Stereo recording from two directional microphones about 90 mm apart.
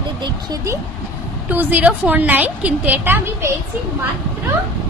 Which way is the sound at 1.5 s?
20° right (ahead or behind).